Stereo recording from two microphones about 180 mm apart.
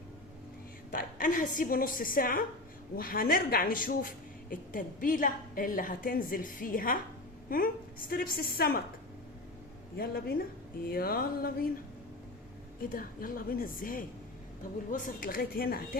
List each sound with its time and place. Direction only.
0.9 s a woman's voice: 50° left (ahead or behind)
10.0 s a woman's voice: 55° left (ahead or behind)
12.8 s a woman's voice: 50° left (ahead or behind)